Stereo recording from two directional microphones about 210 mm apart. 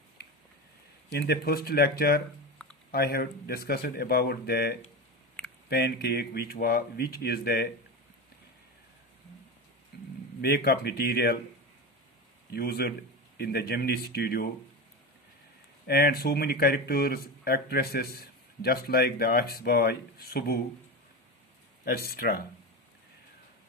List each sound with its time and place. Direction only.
1.1 s speech: 50° left (ahead or behind)
10.4 s speech: 50° left (ahead or behind)
12.5 s speech: 50° left (ahead or behind)
15.9 s speech: 50° left (ahead or behind)
21.8 s speech: 45° left (ahead or behind)